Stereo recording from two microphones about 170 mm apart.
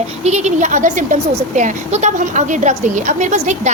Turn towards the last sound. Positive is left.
turn(degrees=-45)  # may be behind; listen again after turning